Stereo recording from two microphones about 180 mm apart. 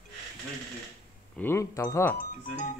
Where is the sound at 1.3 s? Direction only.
15° left (ahead or behind).